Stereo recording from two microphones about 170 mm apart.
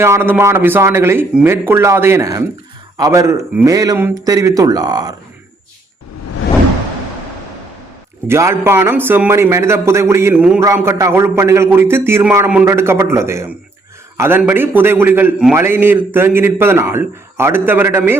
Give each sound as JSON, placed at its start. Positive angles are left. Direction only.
{"t": 0.0, "sound": "a man's voice", "side_deg": -15}
{"t": 8.3, "sound": "a man's voice", "side_deg": -15}